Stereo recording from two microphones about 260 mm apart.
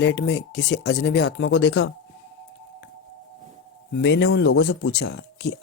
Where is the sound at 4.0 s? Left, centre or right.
Left.